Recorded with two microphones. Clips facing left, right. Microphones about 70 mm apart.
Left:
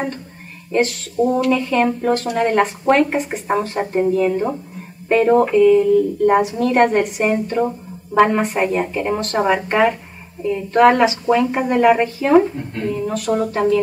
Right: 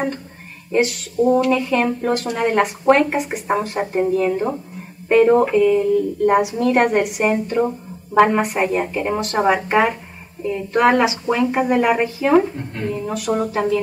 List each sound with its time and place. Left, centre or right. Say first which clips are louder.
0.7 s speech: even; centre